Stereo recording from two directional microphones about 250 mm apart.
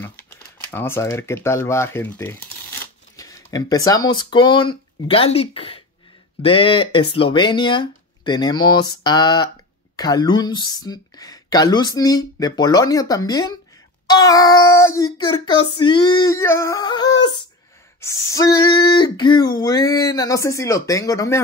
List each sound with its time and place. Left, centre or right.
0.7 s speech: centre